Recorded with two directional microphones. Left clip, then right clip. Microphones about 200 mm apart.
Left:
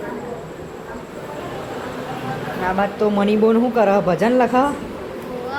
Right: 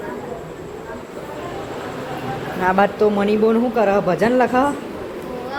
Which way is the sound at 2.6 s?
60° right (ahead or behind).